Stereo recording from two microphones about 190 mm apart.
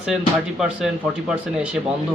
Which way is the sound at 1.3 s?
5° right (ahead or behind).